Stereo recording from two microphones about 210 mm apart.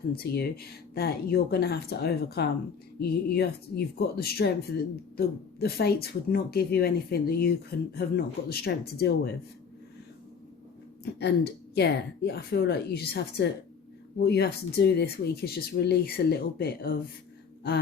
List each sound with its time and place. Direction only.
0.1 s speech: 45° left (ahead or behind)
11.0 s speech: 50° left (ahead or behind)